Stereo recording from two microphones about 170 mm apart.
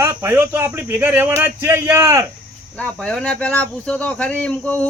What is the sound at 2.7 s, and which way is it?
Speech, 5° left (ahead or behind).